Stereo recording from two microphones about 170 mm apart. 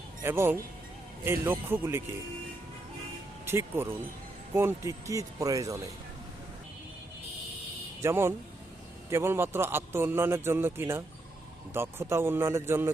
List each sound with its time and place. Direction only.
0.2 s a man's voice: 15° right (ahead or behind)
3.4 s speech: 15° right (ahead or behind)
8.0 s a man's voice: 15° right (ahead or behind)